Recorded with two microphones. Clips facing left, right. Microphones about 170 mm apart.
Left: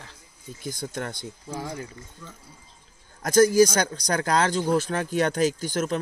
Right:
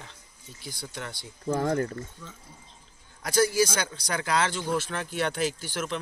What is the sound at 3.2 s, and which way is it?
Speech, 45° left (ahead or behind).